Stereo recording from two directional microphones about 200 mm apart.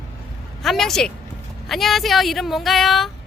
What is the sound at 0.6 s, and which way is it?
Speech, centre (ahead or behind).